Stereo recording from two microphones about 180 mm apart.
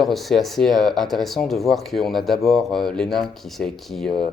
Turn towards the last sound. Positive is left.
turn(degrees=0)  # may be behind; listen again after turning